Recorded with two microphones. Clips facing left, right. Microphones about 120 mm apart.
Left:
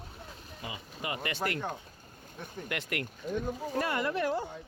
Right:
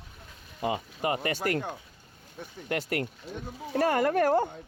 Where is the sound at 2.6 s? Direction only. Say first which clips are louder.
Right 6 dB; 35° right (ahead or behind).